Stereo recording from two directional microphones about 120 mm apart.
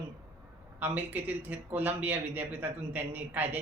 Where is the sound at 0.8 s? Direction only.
15° right (ahead or behind).